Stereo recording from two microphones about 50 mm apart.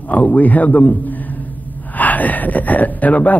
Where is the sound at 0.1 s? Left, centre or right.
Left.